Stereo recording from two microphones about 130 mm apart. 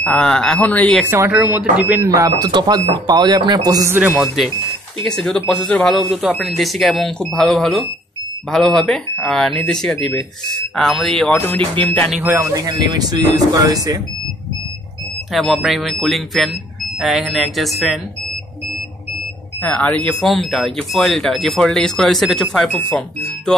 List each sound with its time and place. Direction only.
0.0 s speech: 5° left (ahead or behind)
1.3 s speech: 5° right (ahead or behind)
2.1 s speech: 25° right (ahead or behind)
3.9 s speech: 15° right (ahead or behind)
5.0 s speech: 5° left (ahead or behind)
11.3 s speech: 15° left (ahead or behind)
12.2 s speech: 15° right (ahead or behind)
12.5 s speech: 30° right (ahead or behind)
15.3 s speech: centre (ahead or behind)
19.6 s speech: 10° left (ahead or behind)